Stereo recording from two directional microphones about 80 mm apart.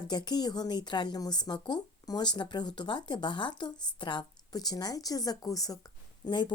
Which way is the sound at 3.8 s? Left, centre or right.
Left.